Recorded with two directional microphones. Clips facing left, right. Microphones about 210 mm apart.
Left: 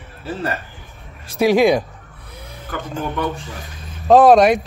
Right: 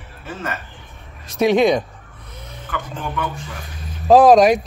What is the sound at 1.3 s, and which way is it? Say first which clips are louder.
Speech: left 1 dB; 5° left (ahead or behind).